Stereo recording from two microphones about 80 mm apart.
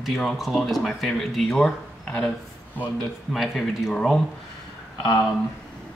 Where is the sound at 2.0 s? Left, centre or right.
Centre.